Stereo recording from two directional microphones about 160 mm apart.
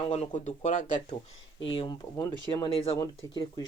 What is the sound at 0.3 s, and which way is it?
Speech, 50° left (ahead or behind).